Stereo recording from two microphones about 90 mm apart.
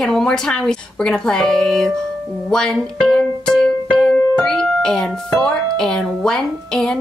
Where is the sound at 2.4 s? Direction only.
10° left (ahead or behind).